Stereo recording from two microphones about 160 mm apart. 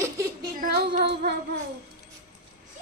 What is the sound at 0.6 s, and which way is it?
Female singing, 80° right.